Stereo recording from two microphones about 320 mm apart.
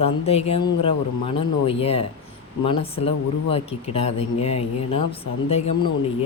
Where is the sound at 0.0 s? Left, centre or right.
Centre.